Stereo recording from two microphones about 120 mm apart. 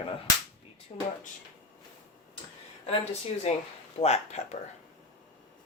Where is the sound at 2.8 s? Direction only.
60° left (ahead or behind).